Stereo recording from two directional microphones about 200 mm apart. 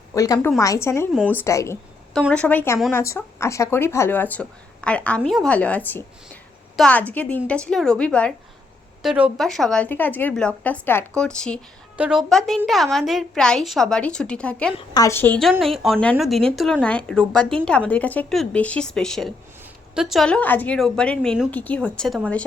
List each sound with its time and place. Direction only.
0.1 s a woman's voice: 15° left (ahead or behind)
0.3 s a woman's voice: 5° left (ahead or behind)
0.6 s speech: 15° left (ahead or behind)
1.1 s a woman's voice: 5° right (ahead or behind)
1.4 s a woman's voice: 15° left (ahead or behind)
14.8 s a woman's voice: 20° left (ahead or behind)